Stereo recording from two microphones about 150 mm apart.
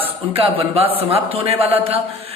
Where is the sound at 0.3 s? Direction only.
35° right (ahead or behind).